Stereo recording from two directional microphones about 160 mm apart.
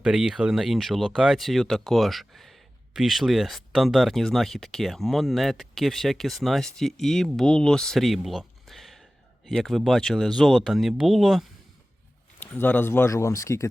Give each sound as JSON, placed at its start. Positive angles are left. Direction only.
{"t": 0.0, "sound": "speech", "side_deg": -5}
{"t": 12.4, "sound": "speech", "side_deg": 10}